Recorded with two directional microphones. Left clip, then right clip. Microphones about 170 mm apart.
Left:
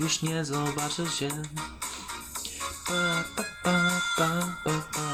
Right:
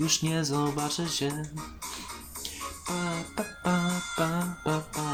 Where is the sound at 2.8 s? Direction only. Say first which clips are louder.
Left 6 dB; 30° left (ahead or behind).